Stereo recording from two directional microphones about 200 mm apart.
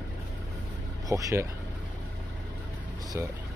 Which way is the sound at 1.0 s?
15° right (ahead or behind).